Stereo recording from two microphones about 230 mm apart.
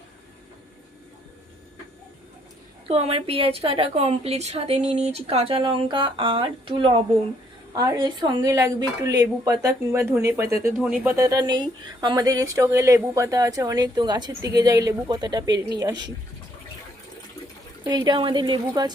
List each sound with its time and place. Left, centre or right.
2.8 s a woman's voice: right
17.8 s a woman's voice: centre